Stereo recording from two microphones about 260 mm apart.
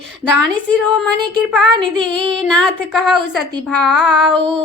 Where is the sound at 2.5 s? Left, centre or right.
Centre.